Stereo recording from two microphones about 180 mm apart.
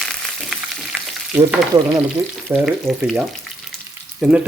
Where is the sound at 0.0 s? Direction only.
Centre (ahead or behind).